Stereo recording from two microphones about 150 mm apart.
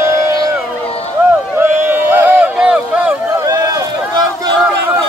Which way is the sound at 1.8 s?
10° right (ahead or behind).